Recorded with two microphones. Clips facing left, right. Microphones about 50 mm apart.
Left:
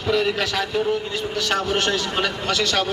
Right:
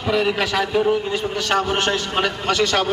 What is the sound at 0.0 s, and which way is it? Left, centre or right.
A man's voice, centre.